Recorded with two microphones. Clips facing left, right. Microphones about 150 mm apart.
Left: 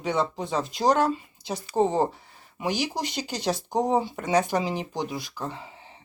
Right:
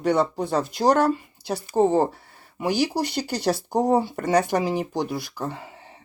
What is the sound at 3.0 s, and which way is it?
Speech, 65° right (ahead or behind).